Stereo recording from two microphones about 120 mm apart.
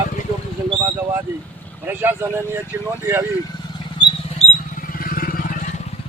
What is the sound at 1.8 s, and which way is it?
Speech, 15° right (ahead or behind).